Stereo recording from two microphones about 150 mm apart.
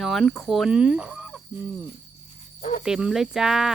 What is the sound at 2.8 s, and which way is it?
Speech, 5° right (ahead or behind).